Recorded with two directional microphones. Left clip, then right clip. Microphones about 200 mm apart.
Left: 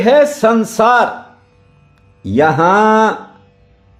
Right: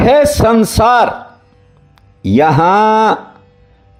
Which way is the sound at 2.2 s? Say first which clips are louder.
Right 1 dB; 25° right (ahead or behind).